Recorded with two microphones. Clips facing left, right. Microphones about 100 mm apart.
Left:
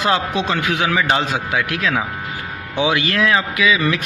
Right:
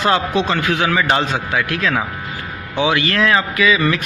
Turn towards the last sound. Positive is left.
turn(degrees=5)  # may be behind; listen again after turning